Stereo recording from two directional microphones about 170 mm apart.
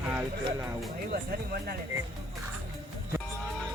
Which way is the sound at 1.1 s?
65° right (ahead or behind).